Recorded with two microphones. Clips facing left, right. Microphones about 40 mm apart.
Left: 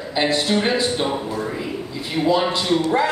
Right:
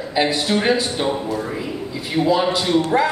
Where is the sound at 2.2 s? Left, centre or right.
Centre.